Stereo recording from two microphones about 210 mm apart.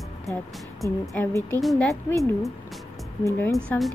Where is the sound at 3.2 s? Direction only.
15° left (ahead or behind).